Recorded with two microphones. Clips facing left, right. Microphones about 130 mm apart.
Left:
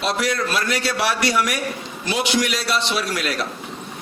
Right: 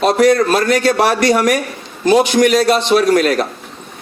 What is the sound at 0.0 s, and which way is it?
A man's voice, 45° right (ahead or behind).